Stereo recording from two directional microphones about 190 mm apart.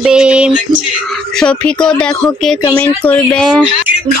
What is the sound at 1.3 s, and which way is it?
A woman's voice, 5° left (ahead or behind).